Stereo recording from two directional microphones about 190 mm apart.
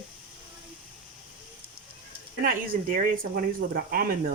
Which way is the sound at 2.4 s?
50° right (ahead or behind).